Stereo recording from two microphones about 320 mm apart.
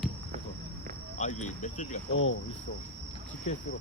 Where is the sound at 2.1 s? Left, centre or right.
Left.